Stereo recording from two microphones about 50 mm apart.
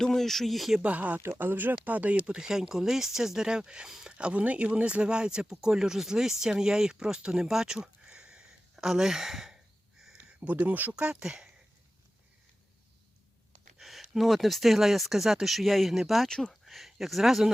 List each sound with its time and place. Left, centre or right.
0.0 s speech: centre
0.8 s speech: right
1.2 s speech: right; by 7.4 s centre
7.4 s a sound: centre
10.4 s speech: right
10.9 s speech: centre
13.7 s speech: centre
16.3 s speech: centre
16.6 s speech: centre